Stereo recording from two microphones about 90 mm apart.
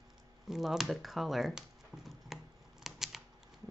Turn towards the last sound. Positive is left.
turn(degrees=-5)  # may be behind; listen again after turning